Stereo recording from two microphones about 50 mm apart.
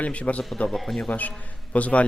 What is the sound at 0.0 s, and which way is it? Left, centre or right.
Speech, left.